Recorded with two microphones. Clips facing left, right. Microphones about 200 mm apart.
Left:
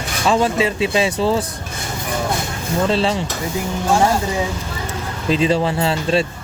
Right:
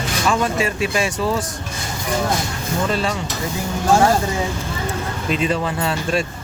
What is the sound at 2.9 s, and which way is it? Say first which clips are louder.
Speech: left 5 dB; 25° left (ahead or behind).